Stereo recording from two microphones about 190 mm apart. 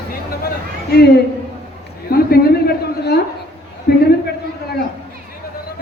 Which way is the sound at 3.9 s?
55° left (ahead or behind).